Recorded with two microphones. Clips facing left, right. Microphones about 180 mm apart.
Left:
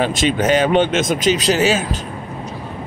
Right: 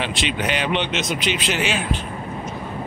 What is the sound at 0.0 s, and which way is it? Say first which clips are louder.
Speech: left 7 dB; 45° left (ahead or behind).